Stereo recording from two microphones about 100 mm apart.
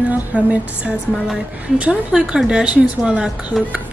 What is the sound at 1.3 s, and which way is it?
A woman's voice, 10° right (ahead or behind).